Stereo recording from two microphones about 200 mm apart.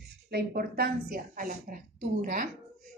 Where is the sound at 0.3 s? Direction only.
50° right (ahead or behind).